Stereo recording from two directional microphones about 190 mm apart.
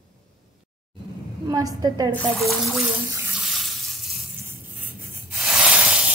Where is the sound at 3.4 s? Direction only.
Centre (ahead or behind).